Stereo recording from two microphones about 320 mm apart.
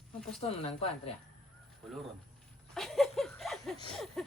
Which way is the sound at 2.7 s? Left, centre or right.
Centre.